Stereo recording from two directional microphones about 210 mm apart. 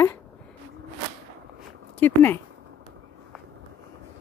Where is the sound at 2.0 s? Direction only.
10° left (ahead or behind).